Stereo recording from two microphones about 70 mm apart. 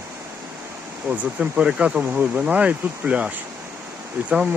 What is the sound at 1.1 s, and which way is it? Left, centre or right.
Speech, centre.